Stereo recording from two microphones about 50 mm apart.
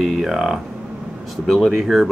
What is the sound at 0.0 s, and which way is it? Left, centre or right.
Speech, centre.